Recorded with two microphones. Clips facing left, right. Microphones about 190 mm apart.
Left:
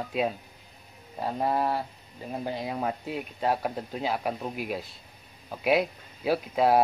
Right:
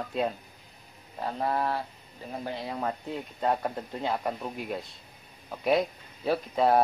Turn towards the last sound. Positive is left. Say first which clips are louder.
# left 1 dB
turn(degrees=5)  # may be behind; listen again after turning